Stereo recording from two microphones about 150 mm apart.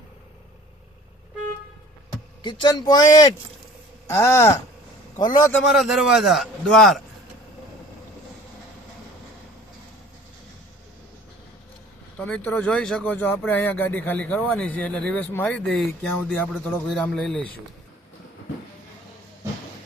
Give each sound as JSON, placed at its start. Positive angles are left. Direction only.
{"t": 2.4, "sound": "a man's voice", "side_deg": 30}
{"t": 5.6, "sound": "a man's voice", "side_deg": 0}
{"t": 12.1, "sound": "a man's voice", "side_deg": 10}